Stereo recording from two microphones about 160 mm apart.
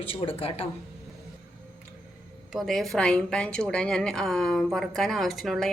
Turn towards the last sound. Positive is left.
turn(degrees=0)  # may be behind; listen again after turning